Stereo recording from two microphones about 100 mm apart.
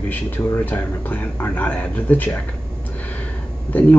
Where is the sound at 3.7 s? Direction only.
15° left (ahead or behind).